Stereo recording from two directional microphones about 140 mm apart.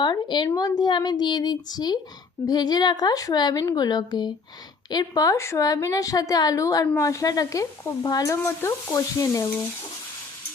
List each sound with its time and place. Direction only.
0.0 s speech: 35° left (ahead or behind)